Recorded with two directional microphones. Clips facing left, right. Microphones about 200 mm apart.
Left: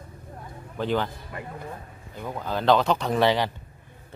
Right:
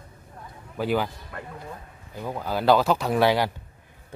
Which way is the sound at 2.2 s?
10° right (ahead or behind).